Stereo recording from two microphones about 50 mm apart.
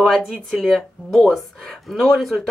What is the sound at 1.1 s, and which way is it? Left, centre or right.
Speech, centre.